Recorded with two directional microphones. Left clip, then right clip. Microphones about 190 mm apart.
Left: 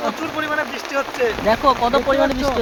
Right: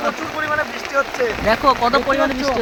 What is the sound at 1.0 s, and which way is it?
Speech, 40° left (ahead or behind).